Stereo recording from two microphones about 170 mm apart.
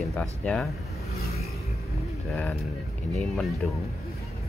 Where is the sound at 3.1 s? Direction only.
Centre (ahead or behind).